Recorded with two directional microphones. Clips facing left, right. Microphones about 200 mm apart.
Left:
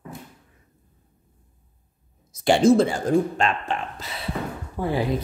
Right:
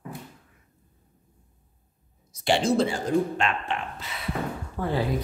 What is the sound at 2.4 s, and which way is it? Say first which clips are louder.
Speech: left 6 dB; 50° left (ahead or behind).